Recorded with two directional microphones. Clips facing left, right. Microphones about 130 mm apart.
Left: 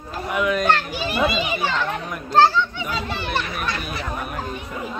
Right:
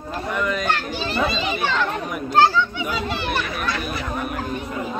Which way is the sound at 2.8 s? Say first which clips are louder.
Right 2 dB; 5° right (ahead or behind).